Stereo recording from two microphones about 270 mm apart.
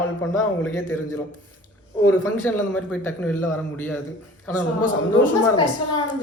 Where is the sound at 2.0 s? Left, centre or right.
Centre.